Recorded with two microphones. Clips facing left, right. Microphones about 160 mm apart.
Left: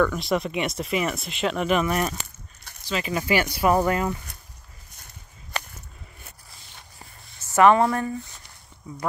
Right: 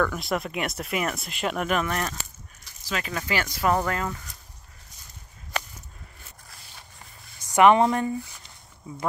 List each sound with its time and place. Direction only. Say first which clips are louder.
0.0 s speech: left 3 dB; centre (ahead or behind)
2.7 s a sound: left 5 dB; 60° left (ahead or behind)
3.1 s speech: left 7 dB; 15° left (ahead or behind)
7.3 s speech: even; 15° right (ahead or behind)